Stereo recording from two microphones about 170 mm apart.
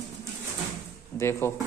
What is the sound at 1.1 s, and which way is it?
Speech, 15° left (ahead or behind).